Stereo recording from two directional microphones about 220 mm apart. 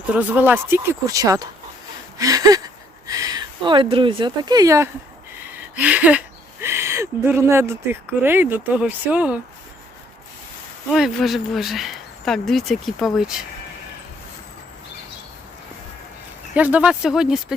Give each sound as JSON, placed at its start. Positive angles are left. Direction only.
{"t": 0.1, "sound": "speech", "side_deg": -5}
{"t": 2.1, "sound": "a sound", "side_deg": -15}
{"t": 3.1, "sound": "speech", "side_deg": -15}
{"t": 10.9, "sound": "speech", "side_deg": 0}
{"t": 16.6, "sound": "speech", "side_deg": -5}